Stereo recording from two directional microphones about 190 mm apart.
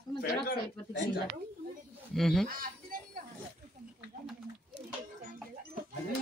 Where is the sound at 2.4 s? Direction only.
45° right (ahead or behind).